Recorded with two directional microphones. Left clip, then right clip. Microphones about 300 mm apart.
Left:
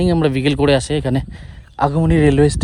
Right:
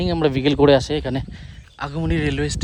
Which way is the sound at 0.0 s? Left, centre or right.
Centre.